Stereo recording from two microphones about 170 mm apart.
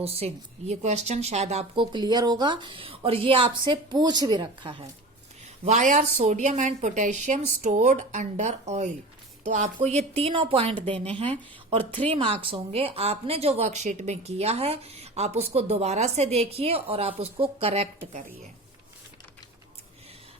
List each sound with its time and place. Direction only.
0.0 s speech: 35° right (ahead or behind)
5.6 s speech: 45° right (ahead or behind)